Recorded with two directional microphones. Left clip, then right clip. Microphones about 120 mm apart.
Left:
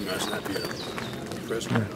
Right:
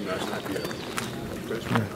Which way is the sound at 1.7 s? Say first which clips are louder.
Right 3 dB; 30° right (ahead or behind).